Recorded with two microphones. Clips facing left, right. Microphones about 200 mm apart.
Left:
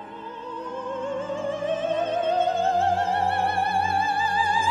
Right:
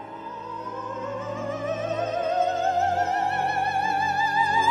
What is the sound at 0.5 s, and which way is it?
Opera, 30° left (ahead or behind).